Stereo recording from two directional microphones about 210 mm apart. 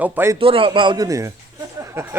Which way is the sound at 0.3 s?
25° right (ahead or behind).